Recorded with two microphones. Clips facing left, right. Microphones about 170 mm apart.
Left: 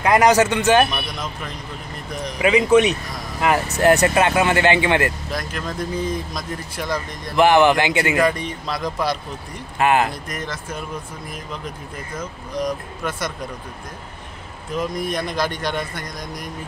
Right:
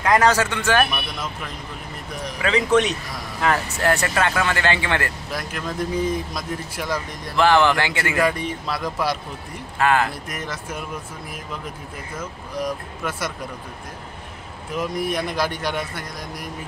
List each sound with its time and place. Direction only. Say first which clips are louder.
0.0 s a man's voice: left 3 dB; 15° left (ahead or behind)
2.4 s a man's voice: left 4 dB; 10° left (ahead or behind)
5.3 s speech: left 1 dB; 10° right (ahead or behind)
7.3 s a man's voice: left 3 dB; 15° left (ahead or behind)
8.2 s speech: left 2 dB; 5° right (ahead or behind)
9.8 s speech: left 2 dB; 20° left (ahead or behind)
10.2 s speech: left 1 dB; 10° right (ahead or behind)
12.2 s speech: left 2 dB; 5° right (ahead or behind)
14.8 s speech: even; 10° right (ahead or behind)